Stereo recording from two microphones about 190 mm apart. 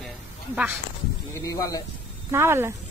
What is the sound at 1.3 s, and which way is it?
Speech, 15° left (ahead or behind).